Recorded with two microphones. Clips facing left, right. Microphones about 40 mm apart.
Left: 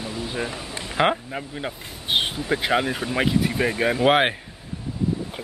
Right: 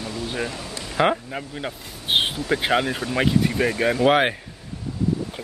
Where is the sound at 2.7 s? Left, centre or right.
Centre.